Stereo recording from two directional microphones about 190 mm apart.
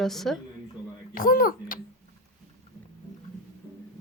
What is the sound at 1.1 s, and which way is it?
Speech, 50° left (ahead or behind).